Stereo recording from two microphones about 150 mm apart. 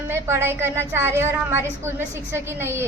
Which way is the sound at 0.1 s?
15° right (ahead or behind).